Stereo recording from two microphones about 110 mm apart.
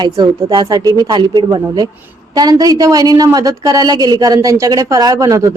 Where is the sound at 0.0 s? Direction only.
40° right (ahead or behind).